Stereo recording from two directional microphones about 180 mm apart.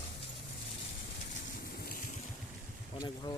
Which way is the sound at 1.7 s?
55° left (ahead or behind).